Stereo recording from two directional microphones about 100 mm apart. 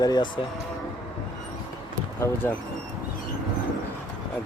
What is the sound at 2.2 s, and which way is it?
Speech, 20° left (ahead or behind).